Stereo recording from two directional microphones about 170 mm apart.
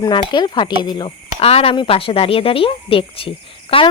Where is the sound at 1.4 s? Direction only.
35° left (ahead or behind).